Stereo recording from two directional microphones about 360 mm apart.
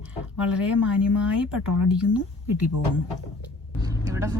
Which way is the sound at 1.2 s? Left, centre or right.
Centre.